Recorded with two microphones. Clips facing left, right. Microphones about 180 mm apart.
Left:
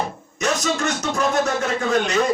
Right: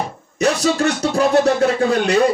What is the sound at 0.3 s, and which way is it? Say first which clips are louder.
Speech: right 6 dB; 35° right (ahead or behind).